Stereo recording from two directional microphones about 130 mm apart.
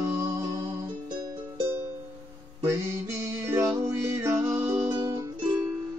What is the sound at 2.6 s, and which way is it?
Music, 20° right (ahead or behind).